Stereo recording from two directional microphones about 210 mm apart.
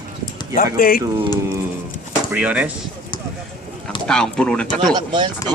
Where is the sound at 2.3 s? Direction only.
5° right (ahead or behind).